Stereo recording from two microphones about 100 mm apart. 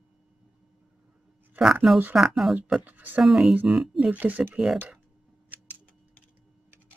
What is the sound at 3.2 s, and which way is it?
Speech, 5° right (ahead or behind).